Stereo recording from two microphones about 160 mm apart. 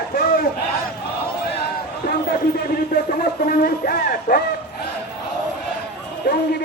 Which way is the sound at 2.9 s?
60° left (ahead or behind).